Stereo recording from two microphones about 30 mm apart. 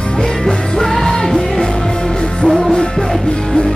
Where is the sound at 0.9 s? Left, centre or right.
Centre.